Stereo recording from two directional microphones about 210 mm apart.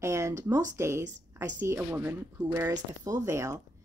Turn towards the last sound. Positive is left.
turn(degrees=-15)  # may be behind; listen again after turning